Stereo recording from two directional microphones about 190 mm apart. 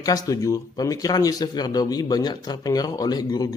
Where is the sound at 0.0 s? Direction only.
20° left (ahead or behind).